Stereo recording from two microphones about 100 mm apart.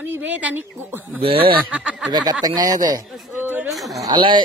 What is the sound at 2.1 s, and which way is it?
Speech, 45° right (ahead or behind).